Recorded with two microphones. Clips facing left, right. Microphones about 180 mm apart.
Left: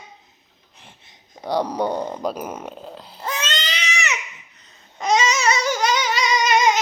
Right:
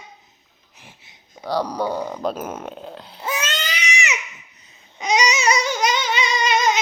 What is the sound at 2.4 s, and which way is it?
Baby cry, centre (ahead or behind).